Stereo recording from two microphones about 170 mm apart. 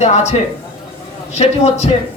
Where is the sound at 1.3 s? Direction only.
40° left (ahead or behind).